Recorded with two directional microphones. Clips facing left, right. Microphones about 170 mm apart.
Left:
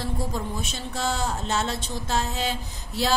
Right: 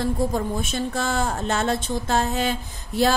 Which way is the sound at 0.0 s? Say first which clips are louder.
Right 6 dB; 50° right (ahead or behind).